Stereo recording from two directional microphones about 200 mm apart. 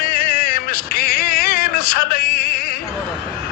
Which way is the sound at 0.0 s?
45° left (ahead or behind).